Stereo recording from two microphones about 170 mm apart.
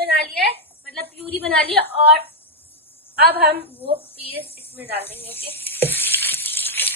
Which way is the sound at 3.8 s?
35° right (ahead or behind).